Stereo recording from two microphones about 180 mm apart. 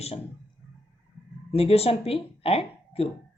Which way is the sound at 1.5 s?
35° left (ahead or behind).